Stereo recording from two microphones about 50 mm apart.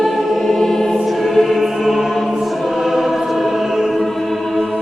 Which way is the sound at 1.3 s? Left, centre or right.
Centre.